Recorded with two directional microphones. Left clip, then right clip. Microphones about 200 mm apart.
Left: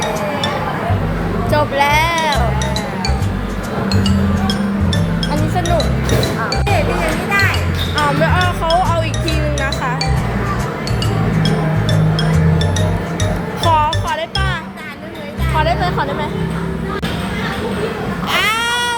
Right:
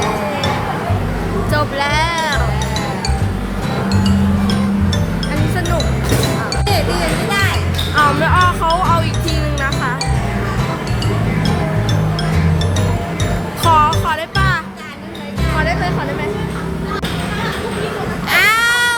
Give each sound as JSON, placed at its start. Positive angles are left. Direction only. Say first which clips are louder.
{"t": 1.5, "sound": "music", "louder": "left 4 dB", "side_deg": 5}
{"t": 3.8, "sound": "music", "louder": "left 1 dB", "side_deg": 20}
{"t": 7.9, "sound": "music", "louder": "right 3 dB", "side_deg": -5}
{"t": 13.7, "sound": "music", "louder": "right 2 dB", "side_deg": -10}
{"t": 15.5, "sound": "music", "louder": "left 2 dB", "side_deg": 0}
{"t": 18.3, "sound": "baby cry", "louder": "right 4 dB", "side_deg": -10}